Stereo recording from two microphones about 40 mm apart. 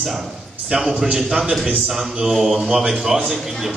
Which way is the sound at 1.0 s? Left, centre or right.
Centre.